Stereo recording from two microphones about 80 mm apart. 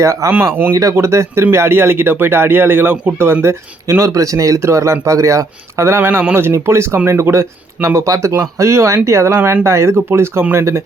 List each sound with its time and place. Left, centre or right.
0.0 s speech: right
0.5 s speech: right
0.8 s speech: right
3.4 s speech: right